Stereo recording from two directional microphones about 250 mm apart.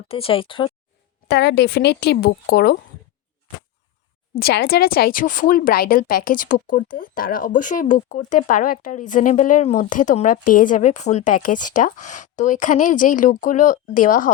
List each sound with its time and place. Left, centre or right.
0.1 s speech: left
1.3 s speech: left
4.4 s speech: left